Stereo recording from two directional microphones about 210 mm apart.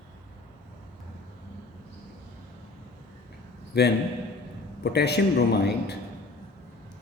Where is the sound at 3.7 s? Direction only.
50° left (ahead or behind).